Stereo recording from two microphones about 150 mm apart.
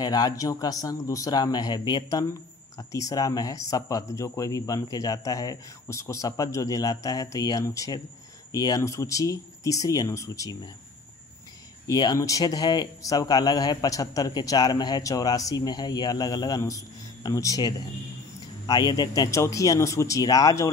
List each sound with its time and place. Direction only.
0.0 s speech: 25° left (ahead or behind)
11.9 s speech: 25° left (ahead or behind)